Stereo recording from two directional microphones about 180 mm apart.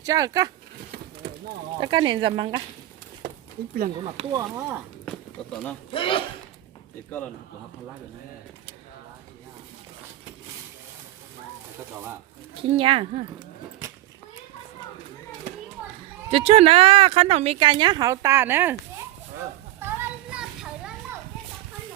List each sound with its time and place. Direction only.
0.0 s speech: 20° right (ahead or behind)
1.8 s speech: 25° right (ahead or behind)
4.0 s speech: 30° right (ahead or behind)
4.4 s speech: 10° right (ahead or behind)
5.0 s a sound: 5° left (ahead or behind)
5.9 s speech: 30° left (ahead or behind)
12.7 s speech: 30° right (ahead or behind)
16.3 s speech: 35° right (ahead or behind); by 18.8 s 10° right (ahead or behind)
19.8 s a sound: 10° right (ahead or behind)